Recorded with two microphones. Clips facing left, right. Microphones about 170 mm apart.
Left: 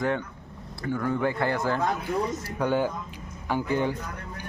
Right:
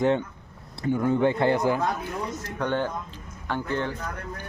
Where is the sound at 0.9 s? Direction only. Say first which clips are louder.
Right 4 dB; 20° right (ahead or behind).